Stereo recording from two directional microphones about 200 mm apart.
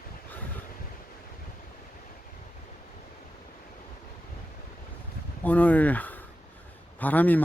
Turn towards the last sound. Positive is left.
turn(degrees=10)  # may be behind; listen again after turning